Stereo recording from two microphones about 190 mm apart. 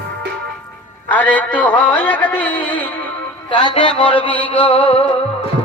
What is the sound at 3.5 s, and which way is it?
Music, 25° left (ahead or behind).